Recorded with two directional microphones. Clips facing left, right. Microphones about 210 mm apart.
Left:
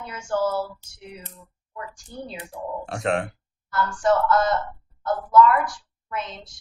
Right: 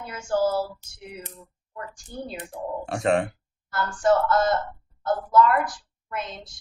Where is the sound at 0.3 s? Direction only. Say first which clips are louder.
Right 1 dB; 35° right (ahead or behind).